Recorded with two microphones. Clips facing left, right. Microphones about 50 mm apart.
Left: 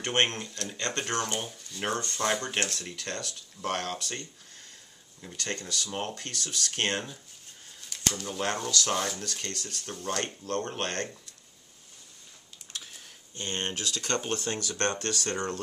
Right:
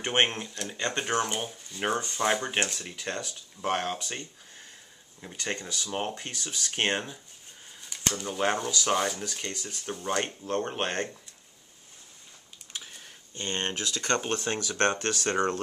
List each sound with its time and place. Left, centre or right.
0.0 s speech: centre
8.2 s speech: centre
12.7 s typing: centre
13.3 s speech: right